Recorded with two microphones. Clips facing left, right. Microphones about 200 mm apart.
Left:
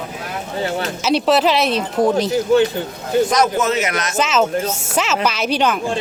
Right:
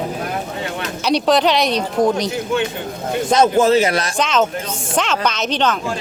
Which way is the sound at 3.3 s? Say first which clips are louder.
Right 4 dB; 30° right (ahead or behind).